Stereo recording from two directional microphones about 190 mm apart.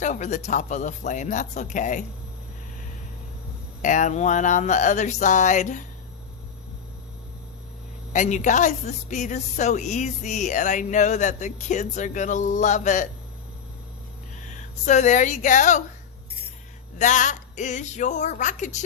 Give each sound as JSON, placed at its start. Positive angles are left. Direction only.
{"t": 0.0, "sound": "a woman's voice", "side_deg": 40}
{"t": 3.8, "sound": "a woman's voice", "side_deg": 40}
{"t": 8.1, "sound": "a woman's voice", "side_deg": 40}
{"t": 14.4, "sound": "speech", "side_deg": 40}
{"t": 17.0, "sound": "a woman's voice", "side_deg": 40}